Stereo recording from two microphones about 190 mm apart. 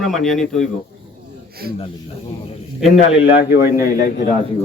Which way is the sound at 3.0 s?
60° left (ahead or behind).